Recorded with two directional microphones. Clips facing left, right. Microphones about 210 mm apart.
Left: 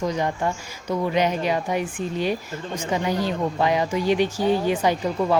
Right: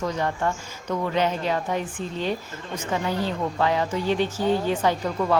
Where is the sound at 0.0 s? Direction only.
15° left (ahead or behind).